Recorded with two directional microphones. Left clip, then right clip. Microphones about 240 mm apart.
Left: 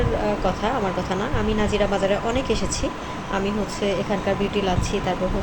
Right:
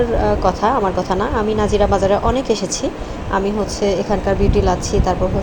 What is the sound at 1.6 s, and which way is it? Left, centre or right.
Speech, centre.